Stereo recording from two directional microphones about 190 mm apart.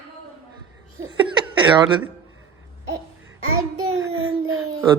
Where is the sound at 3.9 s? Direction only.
90° right.